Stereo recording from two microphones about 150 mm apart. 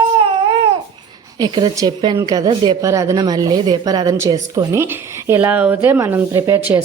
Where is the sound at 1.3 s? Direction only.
25° right (ahead or behind).